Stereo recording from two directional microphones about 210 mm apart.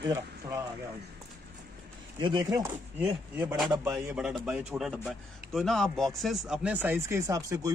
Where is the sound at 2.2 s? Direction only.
20° right (ahead or behind).